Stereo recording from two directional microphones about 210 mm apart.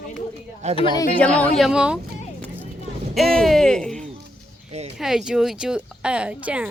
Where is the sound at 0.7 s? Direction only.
20° left (ahead or behind).